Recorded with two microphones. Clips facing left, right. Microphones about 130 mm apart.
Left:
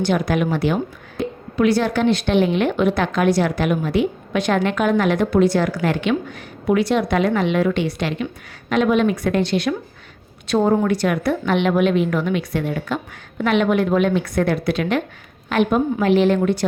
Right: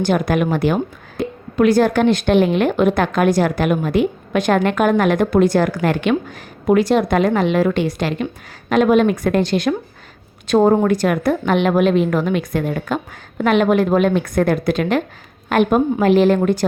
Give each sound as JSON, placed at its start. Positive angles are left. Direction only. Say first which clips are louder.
{"t": 0.0, "sound": "a woman's voice", "louder": "right 2 dB", "side_deg": -50}